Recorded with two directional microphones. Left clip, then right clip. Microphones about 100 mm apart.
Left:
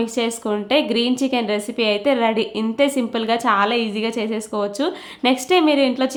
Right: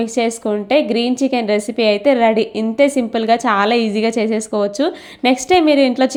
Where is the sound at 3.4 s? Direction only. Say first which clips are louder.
Right 3 dB; 45° right (ahead or behind).